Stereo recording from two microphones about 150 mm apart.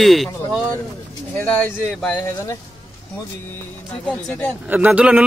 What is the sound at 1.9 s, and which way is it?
Speech, 5° left (ahead or behind).